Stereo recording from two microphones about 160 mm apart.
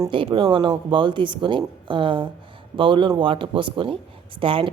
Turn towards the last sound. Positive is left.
turn(degrees=-35)  # may be behind; listen again after turning